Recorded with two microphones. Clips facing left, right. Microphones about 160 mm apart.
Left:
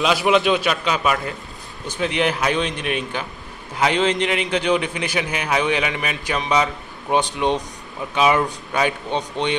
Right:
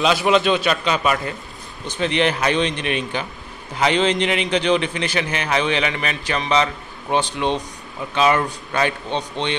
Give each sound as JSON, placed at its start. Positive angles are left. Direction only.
{"t": 0.0, "sound": "a man's voice", "side_deg": 5}